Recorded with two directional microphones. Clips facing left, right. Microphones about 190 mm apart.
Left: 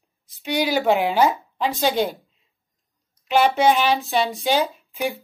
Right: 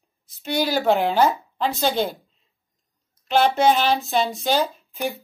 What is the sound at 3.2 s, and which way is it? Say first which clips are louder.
A woman's voice: even; 10° left (ahead or behind).